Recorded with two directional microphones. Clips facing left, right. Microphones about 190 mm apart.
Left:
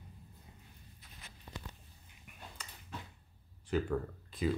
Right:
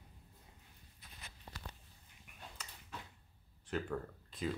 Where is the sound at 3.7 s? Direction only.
Centre (ahead or behind).